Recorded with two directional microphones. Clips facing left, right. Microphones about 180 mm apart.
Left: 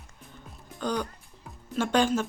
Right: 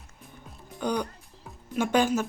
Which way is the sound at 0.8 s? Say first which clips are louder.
Right 1 dB; 10° right (ahead or behind).